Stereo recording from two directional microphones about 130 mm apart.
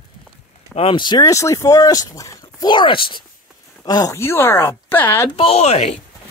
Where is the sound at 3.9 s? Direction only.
25° left (ahead or behind).